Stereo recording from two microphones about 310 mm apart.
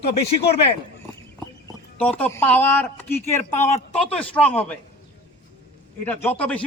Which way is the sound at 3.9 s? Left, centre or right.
Centre.